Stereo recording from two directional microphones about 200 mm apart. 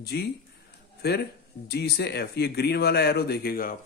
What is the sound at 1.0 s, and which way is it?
Speech, 50° left (ahead or behind).